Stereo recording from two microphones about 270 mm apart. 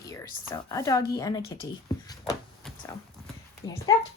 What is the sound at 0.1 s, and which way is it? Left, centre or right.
A woman's voice, centre.